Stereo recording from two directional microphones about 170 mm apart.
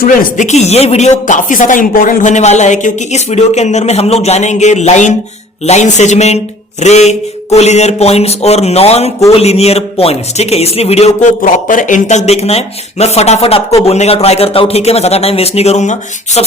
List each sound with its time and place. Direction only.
0.0 s speech: 50° left (ahead or behind)